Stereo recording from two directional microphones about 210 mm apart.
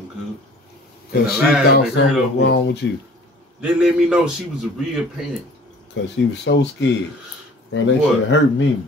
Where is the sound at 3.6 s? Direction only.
5° right (ahead or behind).